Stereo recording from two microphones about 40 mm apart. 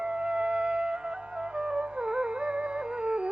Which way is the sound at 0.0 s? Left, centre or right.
Right.